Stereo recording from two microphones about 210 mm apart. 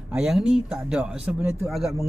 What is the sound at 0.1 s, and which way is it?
Speech, 5° right (ahead or behind).